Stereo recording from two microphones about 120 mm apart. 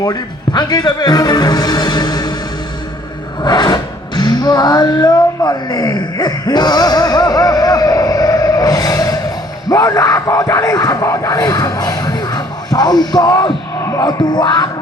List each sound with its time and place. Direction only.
0.0 s speech: 35° left (ahead or behind)
3.4 s a sound: 35° left (ahead or behind)
9.6 s speech: 35° left (ahead or behind)